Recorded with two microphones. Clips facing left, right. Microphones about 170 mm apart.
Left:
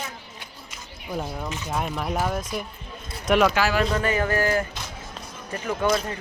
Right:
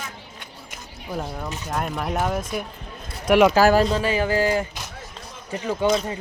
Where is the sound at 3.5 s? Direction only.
40° right (ahead or behind).